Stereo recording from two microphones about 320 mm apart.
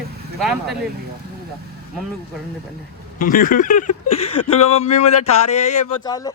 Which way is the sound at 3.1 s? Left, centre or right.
Left.